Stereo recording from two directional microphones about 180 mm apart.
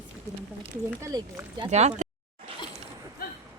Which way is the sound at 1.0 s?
20° right (ahead or behind).